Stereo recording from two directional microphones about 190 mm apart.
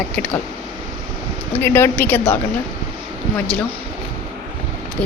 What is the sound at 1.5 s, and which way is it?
Speech, 10° left (ahead or behind).